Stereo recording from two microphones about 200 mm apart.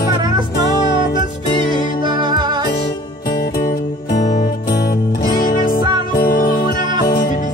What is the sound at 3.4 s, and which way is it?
Music, 45° left (ahead or behind).